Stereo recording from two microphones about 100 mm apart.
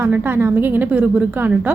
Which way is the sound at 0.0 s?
20° right (ahead or behind).